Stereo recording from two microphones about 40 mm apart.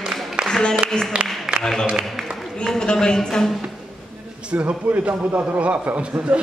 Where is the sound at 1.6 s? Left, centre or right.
Centre.